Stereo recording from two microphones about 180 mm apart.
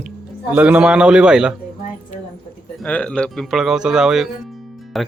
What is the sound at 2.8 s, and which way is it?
Speech, 5° left (ahead or behind).